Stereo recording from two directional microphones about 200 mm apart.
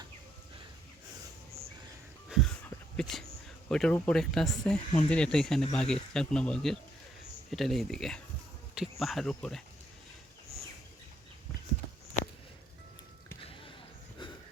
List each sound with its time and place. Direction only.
2.3 s a sound: 5° left (ahead or behind)
3.7 s speech: 5° left (ahead or behind)
13.4 s basketball bounce: 25° left (ahead or behind)